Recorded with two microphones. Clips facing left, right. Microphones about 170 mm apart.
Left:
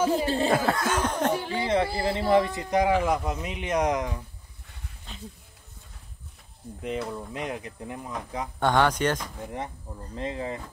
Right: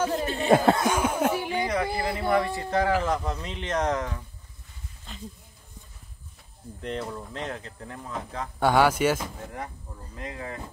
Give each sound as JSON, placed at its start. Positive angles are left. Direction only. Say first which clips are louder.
{"t": 0.0, "sound": "speech", "louder": "left 2 dB", "side_deg": 5}
{"t": 0.5, "sound": "speech", "louder": "right 4 dB", "side_deg": -25}
{"t": 0.9, "sound": "a sound", "louder": "right 1 dB", "side_deg": -10}
{"t": 2.0, "sound": "speech", "louder": "left 2 dB", "side_deg": 25}
{"t": 5.1, "sound": "speech", "louder": "right 1 dB", "side_deg": 0}
{"t": 6.8, "sound": "speech", "louder": "left 1 dB", "side_deg": 5}
{"t": 8.5, "sound": "speech", "louder": "right 2 dB", "side_deg": -5}
{"t": 10.1, "sound": "speech", "louder": "left 5 dB", "side_deg": 25}